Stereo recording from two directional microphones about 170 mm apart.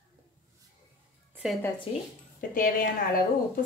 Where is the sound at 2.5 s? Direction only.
55° left (ahead or behind).